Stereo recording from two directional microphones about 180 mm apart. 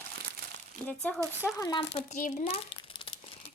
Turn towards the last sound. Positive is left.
turn(degrees=30)  # may be behind; listen again after turning